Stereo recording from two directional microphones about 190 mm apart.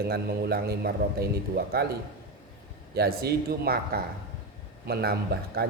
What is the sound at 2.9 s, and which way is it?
Speech, 55° right (ahead or behind).